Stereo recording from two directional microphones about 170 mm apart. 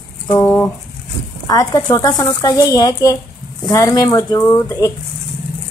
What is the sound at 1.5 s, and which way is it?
Speech, 20° left (ahead or behind).